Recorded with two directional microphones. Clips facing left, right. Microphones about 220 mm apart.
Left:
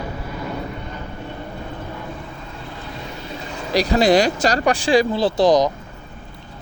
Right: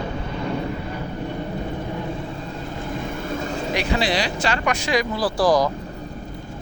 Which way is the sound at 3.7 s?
35° left (ahead or behind).